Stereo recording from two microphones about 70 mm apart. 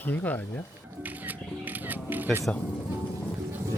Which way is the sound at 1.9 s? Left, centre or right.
Right.